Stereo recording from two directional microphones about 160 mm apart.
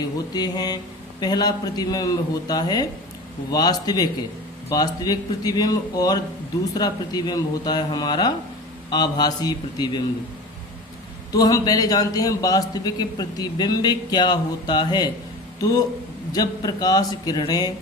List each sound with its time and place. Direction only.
0.3 s a man's voice: 25° left (ahead or behind)
11.3 s a man's voice: 25° left (ahead or behind)
16.3 s a man's voice: 25° left (ahead or behind)